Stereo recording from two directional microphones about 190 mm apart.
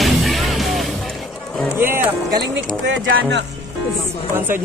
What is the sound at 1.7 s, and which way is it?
Music, 10° right (ahead or behind).